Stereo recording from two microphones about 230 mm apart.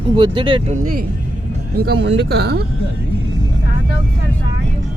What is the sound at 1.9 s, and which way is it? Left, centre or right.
Speech, right.